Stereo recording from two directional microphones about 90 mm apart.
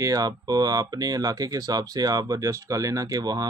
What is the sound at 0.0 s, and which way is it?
Speech, 40° right (ahead or behind).